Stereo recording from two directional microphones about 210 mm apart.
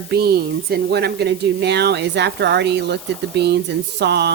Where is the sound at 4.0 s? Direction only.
50° right (ahead or behind).